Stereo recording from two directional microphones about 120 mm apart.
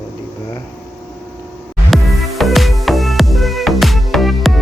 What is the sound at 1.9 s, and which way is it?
Music, centre (ahead or behind).